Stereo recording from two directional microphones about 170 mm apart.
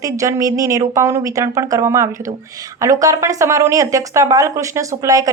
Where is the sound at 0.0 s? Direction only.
20° right (ahead or behind).